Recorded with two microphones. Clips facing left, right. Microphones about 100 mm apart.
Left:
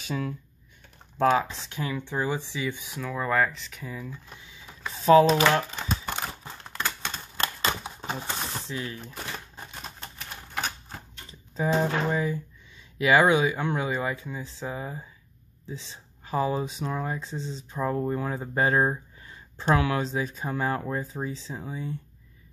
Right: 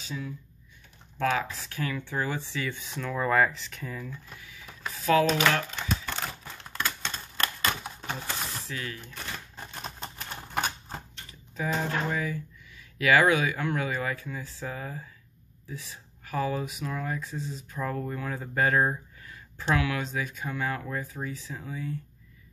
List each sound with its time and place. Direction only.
0.0 s speech: 65° left (ahead or behind)
1.2 s speech: 25° left (ahead or behind); by 4.2 s 10° left (ahead or behind)
4.3 s printer: 25° left (ahead or behind)
4.9 s typing: 30° left (ahead or behind)
7.1 s typewriter: 25° left (ahead or behind)
8.0 s speech: 20° left (ahead or behind)
9.6 s typewriter: centre (ahead or behind)
11.5 s speech: 30° left (ahead or behind)